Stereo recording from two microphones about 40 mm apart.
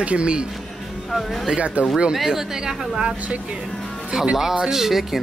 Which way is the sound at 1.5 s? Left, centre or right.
Right.